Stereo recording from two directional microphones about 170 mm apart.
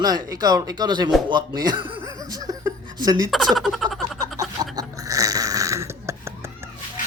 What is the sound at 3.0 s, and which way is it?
Speech, 20° right (ahead or behind).